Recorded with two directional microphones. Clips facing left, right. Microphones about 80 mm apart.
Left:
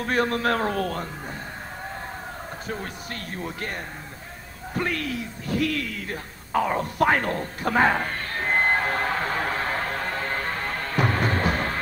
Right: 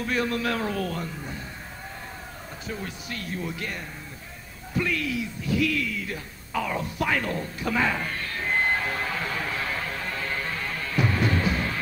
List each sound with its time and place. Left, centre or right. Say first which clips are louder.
0.0 s speech: left 3 dB; left
2.7 s speech: even; left
4.7 s a sound: even; left